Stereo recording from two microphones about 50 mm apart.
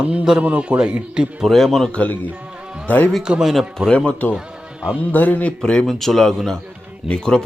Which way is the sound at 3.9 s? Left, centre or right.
Left.